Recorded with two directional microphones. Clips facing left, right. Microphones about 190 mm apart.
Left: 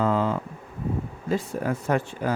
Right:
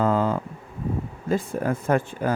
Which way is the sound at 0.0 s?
45° right (ahead or behind).